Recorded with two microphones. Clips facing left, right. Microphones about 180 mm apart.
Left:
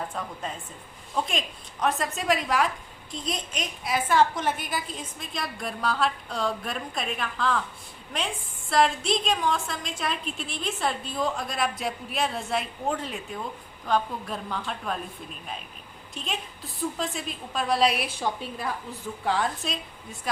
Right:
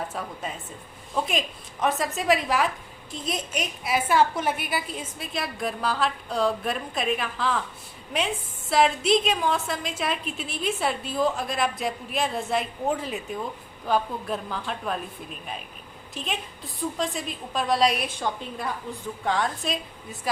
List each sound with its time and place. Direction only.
0.1 s a woman's voice: 5° right (ahead or behind)
8.7 s a woman's voice: centre (ahead or behind)
16.1 s a woman's voice: centre (ahead or behind)